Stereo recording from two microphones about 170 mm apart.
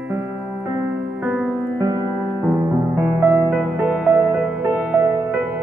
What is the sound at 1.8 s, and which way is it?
Music, 20° right (ahead or behind).